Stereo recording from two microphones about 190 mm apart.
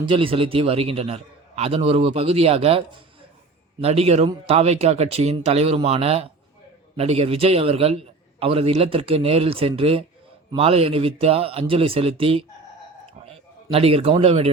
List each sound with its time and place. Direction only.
0.0 s a man's voice: 25° right (ahead or behind)